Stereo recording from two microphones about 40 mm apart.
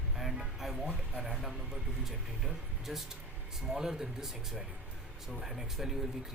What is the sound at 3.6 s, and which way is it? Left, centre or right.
Speech, centre.